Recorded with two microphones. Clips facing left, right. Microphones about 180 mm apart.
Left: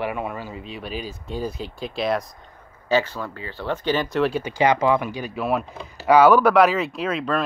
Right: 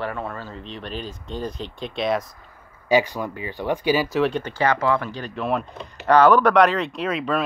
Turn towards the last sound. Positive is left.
turn(degrees=0)  # may be behind; listen again after turning